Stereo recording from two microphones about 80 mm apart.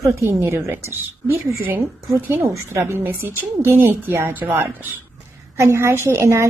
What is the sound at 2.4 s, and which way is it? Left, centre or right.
A woman's voice, right.